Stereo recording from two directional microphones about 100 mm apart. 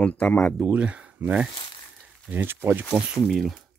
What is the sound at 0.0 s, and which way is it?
Speech, 15° left (ahead or behind).